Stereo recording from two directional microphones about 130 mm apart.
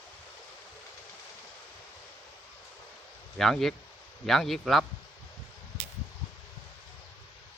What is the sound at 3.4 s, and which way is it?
A man's voice, centre (ahead or behind).